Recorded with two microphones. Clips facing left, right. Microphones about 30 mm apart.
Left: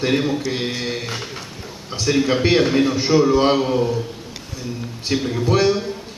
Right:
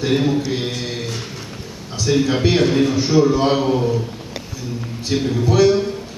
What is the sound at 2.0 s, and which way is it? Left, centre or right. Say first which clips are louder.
A man's voice: even; centre.